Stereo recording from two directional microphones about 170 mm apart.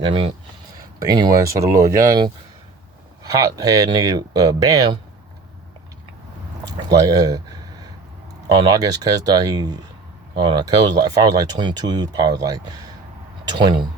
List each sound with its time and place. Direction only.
0.0 s speech: 30° right (ahead or behind)
3.3 s speech: 20° right (ahead or behind)
6.8 s speech: 20° right (ahead or behind)
8.4 s speech: 25° right (ahead or behind)